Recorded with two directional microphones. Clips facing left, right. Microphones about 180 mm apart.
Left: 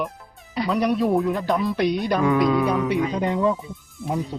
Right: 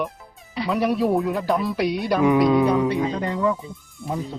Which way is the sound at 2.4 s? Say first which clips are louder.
Right 3 dB; 25° right (ahead or behind).